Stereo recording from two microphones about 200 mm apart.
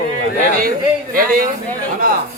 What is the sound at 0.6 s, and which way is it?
Music, 45° right (ahead or behind).